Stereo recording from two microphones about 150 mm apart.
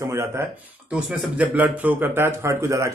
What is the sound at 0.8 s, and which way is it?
Speech, 10° right (ahead or behind).